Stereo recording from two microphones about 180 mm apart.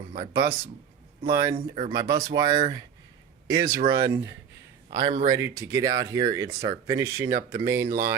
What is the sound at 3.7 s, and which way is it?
Speech, 25° right (ahead or behind).